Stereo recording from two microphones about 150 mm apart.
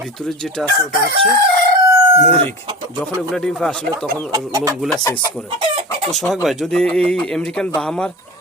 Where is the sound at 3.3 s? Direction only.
5° left (ahead or behind).